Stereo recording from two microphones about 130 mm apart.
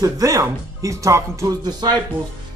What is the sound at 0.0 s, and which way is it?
Speech, 25° right (ahead or behind).